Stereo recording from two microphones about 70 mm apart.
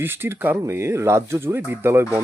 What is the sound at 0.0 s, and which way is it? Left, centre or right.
Speech, right.